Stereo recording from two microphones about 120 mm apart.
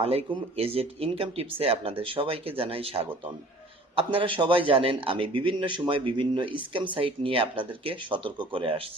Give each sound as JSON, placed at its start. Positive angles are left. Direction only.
{"t": 0.0, "sound": "a man's voice", "side_deg": -55}